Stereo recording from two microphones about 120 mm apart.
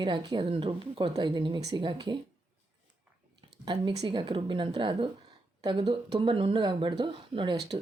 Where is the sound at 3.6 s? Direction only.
40° right (ahead or behind).